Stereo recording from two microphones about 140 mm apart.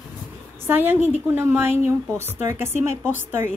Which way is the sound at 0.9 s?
50° left (ahead or behind).